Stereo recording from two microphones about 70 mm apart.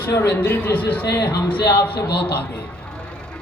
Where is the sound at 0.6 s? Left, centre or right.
Left.